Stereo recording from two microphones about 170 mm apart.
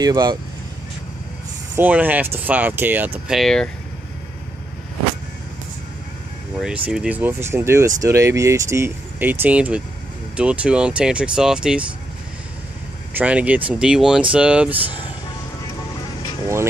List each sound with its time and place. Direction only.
0.0 s speech: 25° right (ahead or behind)
1.8 s speech: 10° right (ahead or behind)
3.3 s speech: 5° left (ahead or behind)
6.5 s speech: 5° right (ahead or behind)
13.1 s speech: 10° right (ahead or behind)